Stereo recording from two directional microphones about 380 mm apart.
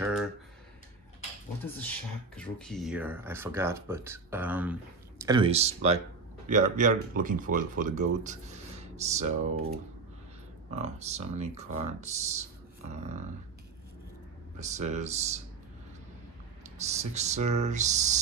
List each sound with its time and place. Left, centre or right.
0.0 s a sound: centre
1.6 s speech: centre
10.8 s speech: centre
14.6 s speech: centre
16.8 s speech: centre